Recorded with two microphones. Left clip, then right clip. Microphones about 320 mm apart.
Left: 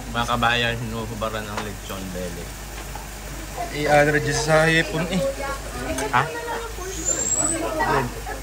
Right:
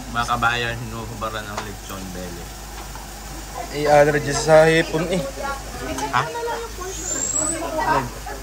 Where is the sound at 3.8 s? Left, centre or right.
Centre.